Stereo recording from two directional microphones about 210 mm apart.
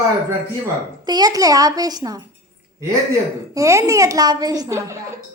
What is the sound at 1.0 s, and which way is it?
A child's voice, 20° right (ahead or behind).